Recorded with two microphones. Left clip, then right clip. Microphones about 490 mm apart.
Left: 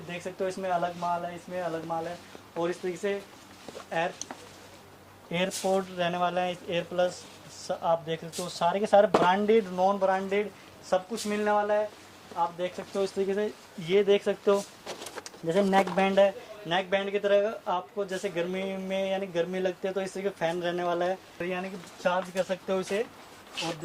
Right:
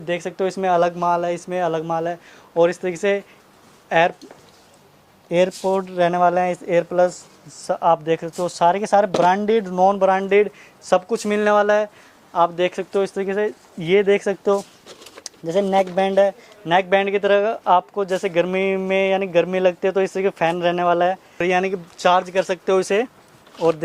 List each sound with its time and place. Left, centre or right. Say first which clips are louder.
0.1 s speech: right 10 dB; right
5.3 s speech: right 9 dB; right
15.4 s speech: right 6 dB; right
21.3 s speech: right 14 dB; right